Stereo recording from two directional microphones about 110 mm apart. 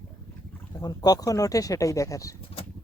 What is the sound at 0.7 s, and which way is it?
Speech, 35° left (ahead or behind).